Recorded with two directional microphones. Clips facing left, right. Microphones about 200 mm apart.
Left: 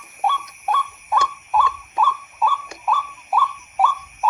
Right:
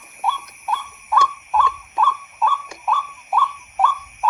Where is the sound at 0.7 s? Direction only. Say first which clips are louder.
Left 3 dB; 50° left (ahead or behind).